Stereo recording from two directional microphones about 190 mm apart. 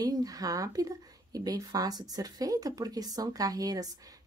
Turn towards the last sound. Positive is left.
turn(degrees=-20)  # may be behind; listen again after turning